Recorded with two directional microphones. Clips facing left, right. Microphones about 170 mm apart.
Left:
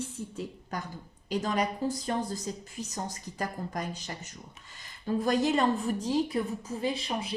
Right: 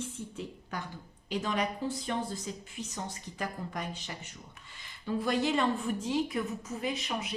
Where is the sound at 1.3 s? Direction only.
40° left (ahead or behind).